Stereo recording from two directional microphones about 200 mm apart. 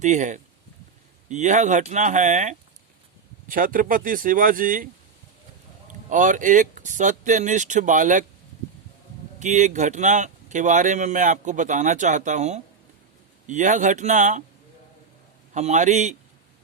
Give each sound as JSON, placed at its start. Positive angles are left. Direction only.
{"t": 0.0, "sound": "speech", "side_deg": -35}
{"t": 6.1, "sound": "speech", "side_deg": -40}
{"t": 9.4, "sound": "speech", "side_deg": -35}
{"t": 15.5, "sound": "speech", "side_deg": -35}